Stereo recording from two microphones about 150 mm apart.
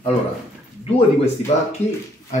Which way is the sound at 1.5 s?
50° left (ahead or behind).